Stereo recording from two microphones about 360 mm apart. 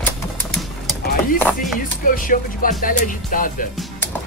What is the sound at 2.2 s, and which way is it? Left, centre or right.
Speech, left.